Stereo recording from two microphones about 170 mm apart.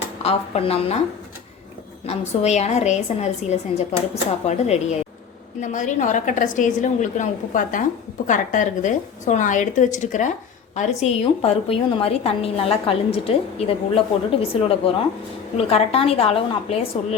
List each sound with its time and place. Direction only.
0.2 s a woman's voice: 40° left (ahead or behind)
2.0 s a woman's voice: 40° left (ahead or behind)